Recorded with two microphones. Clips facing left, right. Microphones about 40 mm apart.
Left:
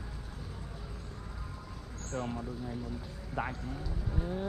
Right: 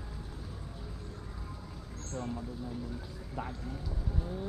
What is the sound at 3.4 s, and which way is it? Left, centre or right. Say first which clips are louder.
Speech: left 4 dB; left.